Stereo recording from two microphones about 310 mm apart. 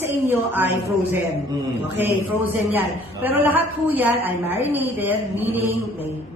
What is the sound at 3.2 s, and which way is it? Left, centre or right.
A woman's voice, centre.